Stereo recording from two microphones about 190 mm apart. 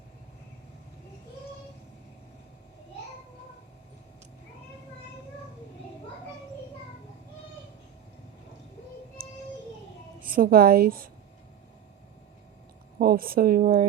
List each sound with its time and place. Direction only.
9.2 s music: 50° right (ahead or behind)
10.2 s a woman's voice: 50° right (ahead or behind)
13.0 s a woman's voice: 50° right (ahead or behind)